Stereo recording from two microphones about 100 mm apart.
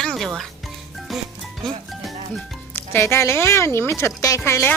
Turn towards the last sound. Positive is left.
turn(degrees=25)  # may be behind; listen again after turning